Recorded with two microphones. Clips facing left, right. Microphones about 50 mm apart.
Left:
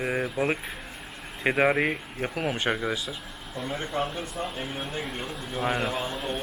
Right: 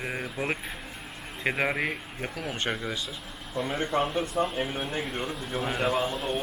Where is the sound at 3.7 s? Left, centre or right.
Right.